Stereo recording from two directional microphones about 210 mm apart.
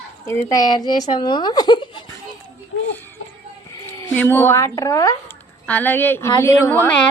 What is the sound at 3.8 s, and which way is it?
A child's voice, 10° left (ahead or behind).